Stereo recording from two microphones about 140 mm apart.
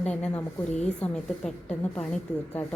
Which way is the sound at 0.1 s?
10° left (ahead or behind).